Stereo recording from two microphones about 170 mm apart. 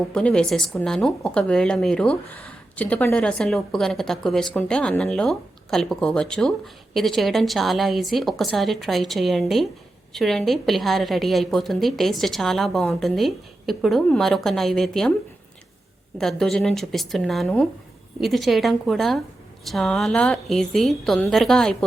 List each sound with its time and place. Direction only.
0.1 s speech: 5° left (ahead or behind)
16.1 s speech: centre (ahead or behind)